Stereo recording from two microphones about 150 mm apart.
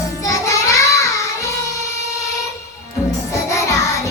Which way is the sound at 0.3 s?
20° left (ahead or behind).